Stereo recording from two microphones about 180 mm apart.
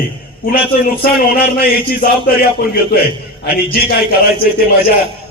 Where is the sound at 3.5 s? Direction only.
60° left (ahead or behind).